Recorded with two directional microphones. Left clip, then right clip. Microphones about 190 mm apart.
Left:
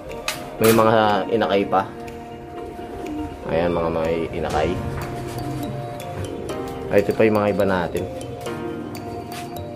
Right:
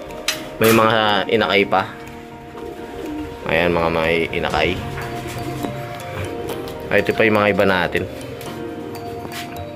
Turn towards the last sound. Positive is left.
turn(degrees=-10)  # may be behind; listen again after turning